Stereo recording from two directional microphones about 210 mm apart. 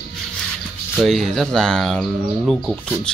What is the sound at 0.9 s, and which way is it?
Speech, centre (ahead or behind).